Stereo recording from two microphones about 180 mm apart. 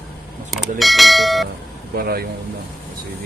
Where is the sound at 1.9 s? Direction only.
55° right (ahead or behind).